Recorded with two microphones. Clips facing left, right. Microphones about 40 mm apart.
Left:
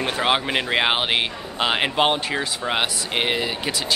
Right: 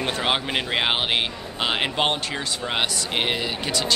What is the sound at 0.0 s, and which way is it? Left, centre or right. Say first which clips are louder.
Speech: left 3 dB; centre.